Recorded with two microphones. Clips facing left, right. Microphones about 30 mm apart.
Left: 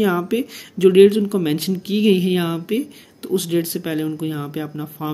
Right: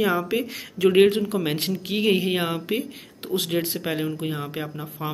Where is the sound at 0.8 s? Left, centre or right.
Right.